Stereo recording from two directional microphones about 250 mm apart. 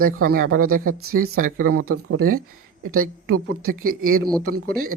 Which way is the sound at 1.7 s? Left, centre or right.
Right.